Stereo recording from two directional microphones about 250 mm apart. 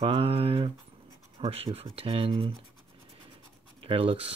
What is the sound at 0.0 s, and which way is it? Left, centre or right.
Speech, right.